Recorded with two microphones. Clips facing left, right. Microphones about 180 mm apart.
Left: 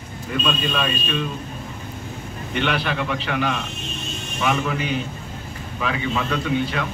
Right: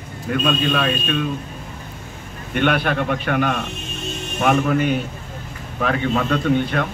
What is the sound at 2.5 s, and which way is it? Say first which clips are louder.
A man's voice: right 4 dB; 50° right (ahead or behind).